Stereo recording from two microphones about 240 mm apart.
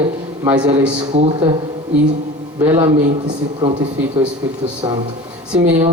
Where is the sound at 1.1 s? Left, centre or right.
Right.